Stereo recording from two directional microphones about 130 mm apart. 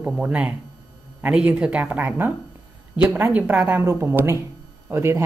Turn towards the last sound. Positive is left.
turn(degrees=-20)  # may be behind; listen again after turning